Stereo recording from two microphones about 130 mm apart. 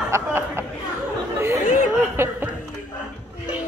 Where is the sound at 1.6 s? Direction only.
90° left.